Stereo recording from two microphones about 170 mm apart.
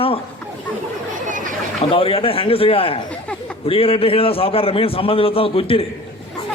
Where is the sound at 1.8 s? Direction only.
35° left (ahead or behind).